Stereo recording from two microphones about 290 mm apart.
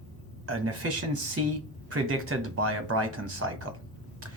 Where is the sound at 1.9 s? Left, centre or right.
Right.